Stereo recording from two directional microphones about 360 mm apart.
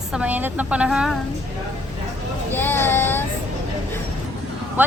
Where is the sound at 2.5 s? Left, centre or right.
Centre.